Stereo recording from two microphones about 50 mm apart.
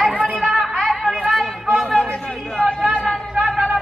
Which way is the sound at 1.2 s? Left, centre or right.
Centre.